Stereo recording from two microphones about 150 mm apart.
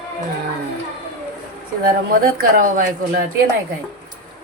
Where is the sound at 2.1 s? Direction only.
65° right (ahead or behind).